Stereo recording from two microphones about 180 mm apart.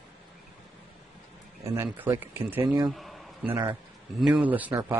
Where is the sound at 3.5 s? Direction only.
15° right (ahead or behind).